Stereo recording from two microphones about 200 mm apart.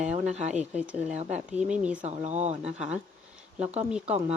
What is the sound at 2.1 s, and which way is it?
Speech, 35° right (ahead or behind).